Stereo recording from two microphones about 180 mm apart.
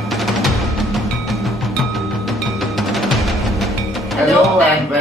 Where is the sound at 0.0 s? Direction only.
Centre (ahead or behind).